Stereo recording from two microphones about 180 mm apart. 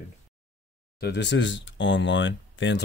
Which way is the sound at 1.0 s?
80° left.